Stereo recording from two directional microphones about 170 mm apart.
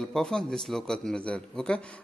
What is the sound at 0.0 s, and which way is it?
A man's voice, 5° left (ahead or behind).